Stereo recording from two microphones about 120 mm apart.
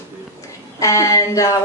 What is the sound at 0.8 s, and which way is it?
Speech, 25° left (ahead or behind).